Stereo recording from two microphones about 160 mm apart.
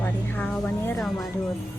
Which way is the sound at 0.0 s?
10° left (ahead or behind).